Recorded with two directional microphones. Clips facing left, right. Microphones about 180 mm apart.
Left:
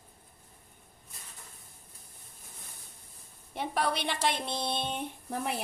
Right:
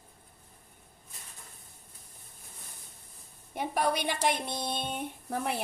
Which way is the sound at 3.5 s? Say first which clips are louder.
Right 2 dB; 10° right (ahead or behind).